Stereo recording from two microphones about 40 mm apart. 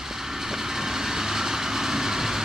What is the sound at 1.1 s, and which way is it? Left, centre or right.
Vehicle, centre.